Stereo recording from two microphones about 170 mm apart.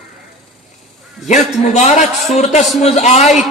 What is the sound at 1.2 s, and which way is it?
Speech, 45° left (ahead or behind).